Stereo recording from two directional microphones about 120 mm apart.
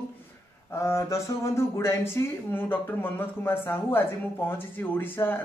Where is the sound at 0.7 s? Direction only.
25° left (ahead or behind).